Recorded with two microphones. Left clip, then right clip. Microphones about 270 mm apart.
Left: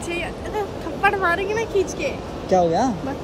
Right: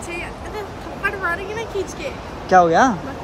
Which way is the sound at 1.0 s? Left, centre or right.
Centre.